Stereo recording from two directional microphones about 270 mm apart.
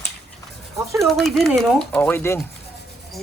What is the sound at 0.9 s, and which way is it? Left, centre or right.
A woman's voice, centre.